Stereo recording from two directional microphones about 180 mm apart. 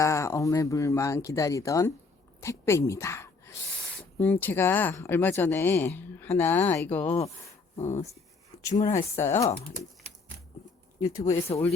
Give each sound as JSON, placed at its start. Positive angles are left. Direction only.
{"t": 0.0, "sound": "speech", "side_deg": 15}
{"t": 2.4, "sound": "a sound", "side_deg": 15}
{"t": 4.2, "sound": "speech", "side_deg": 10}
{"t": 7.8, "sound": "speech", "side_deg": 40}
{"t": 8.5, "sound": "a sound", "side_deg": 20}
{"t": 8.9, "sound": "speech", "side_deg": 15}
{"t": 11.3, "sound": "speech", "side_deg": 35}